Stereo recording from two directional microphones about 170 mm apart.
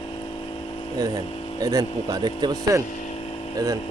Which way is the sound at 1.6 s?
20° right (ahead or behind).